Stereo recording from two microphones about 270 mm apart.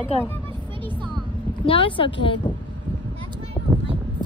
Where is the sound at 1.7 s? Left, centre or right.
Centre.